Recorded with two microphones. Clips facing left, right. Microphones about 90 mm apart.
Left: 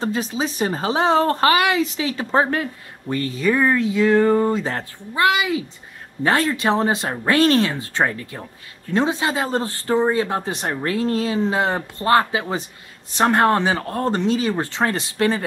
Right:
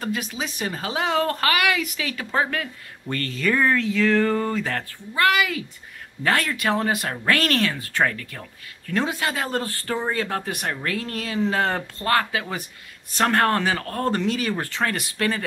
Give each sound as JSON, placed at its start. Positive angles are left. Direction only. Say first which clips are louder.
{"t": 0.0, "sound": "speech", "louder": "left 5 dB", "side_deg": 30}
{"t": 3.1, "sound": "speech", "louder": "left 4 dB", "side_deg": 15}